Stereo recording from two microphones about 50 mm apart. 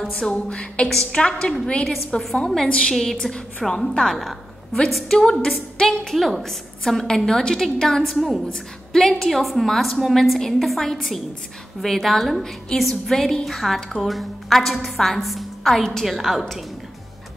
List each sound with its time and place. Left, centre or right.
0.3 s a woman's voice: left; by 3.2 s centre
3.2 s a woman's voice: centre